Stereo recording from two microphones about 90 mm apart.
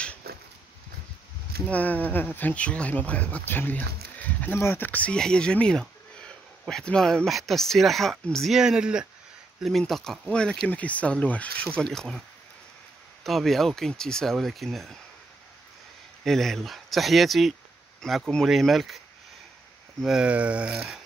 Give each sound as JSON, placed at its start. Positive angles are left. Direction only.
{"t": 1.7, "sound": "speech", "side_deg": 20}
{"t": 8.5, "sound": "speech", "side_deg": -10}
{"t": 9.6, "sound": "speech", "side_deg": 0}
{"t": 13.2, "sound": "speech", "side_deg": 0}
{"t": 16.3, "sound": "speech", "side_deg": 5}
{"t": 20.0, "sound": "speech", "side_deg": -5}